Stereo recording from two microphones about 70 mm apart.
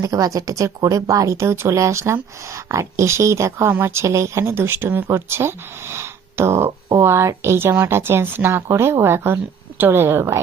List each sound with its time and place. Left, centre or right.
0.0 s speech: right
3.7 s speech: right